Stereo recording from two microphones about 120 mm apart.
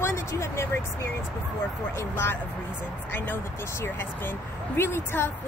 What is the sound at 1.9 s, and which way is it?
Speech, 20° left (ahead or behind).